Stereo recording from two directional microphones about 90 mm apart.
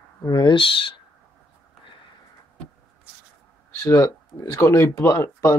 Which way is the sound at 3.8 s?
35° left (ahead or behind).